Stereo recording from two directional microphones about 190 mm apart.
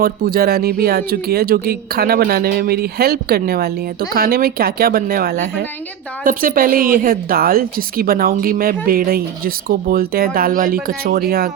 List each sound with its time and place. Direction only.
0.0 s a woman's voice: 50° right (ahead or behind)